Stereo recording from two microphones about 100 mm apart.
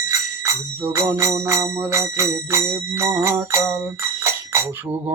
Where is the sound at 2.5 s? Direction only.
30° right (ahead or behind).